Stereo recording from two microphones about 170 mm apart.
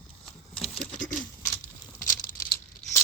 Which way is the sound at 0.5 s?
5° left (ahead or behind).